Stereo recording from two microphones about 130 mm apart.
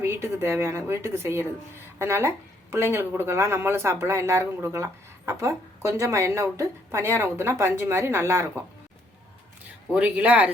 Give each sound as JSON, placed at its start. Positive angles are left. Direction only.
{"t": 0.0, "sound": "a woman's voice", "side_deg": -20}
{"t": 9.9, "sound": "speech", "side_deg": -10}